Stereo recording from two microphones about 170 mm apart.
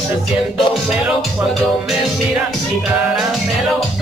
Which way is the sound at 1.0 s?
Centre (ahead or behind).